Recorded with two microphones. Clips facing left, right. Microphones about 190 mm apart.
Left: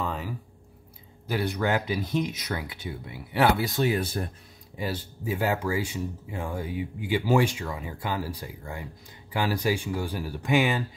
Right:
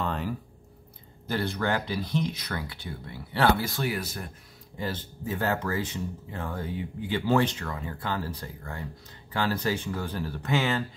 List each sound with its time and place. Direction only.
0.0 s a sound: 5° left (ahead or behind)
1.2 s speech: 15° left (ahead or behind); by 4.3 s 30° left (ahead or behind)
4.7 s speech: 10° left (ahead or behind)